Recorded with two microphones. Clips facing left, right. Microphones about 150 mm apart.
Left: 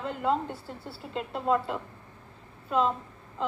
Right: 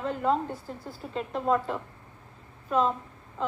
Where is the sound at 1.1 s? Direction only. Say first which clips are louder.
Right 1 dB; centre (ahead or behind).